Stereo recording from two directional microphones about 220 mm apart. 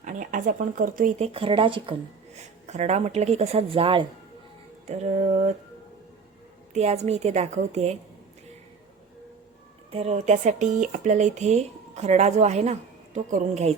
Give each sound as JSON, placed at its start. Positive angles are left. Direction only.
{"t": 0.0, "sound": "speech", "side_deg": -35}
{"t": 6.7, "sound": "speech", "side_deg": -30}
{"t": 9.9, "sound": "speech", "side_deg": -30}